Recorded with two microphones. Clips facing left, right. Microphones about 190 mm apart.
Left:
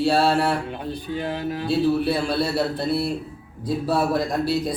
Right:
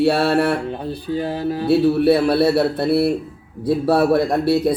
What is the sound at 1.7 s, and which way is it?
A man's voice, 65° right (ahead or behind).